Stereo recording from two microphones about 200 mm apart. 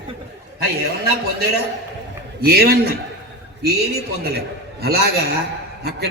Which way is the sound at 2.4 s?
50° right (ahead or behind).